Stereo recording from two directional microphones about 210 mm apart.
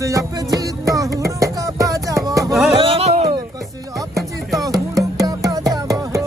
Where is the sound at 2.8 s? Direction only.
25° right (ahead or behind).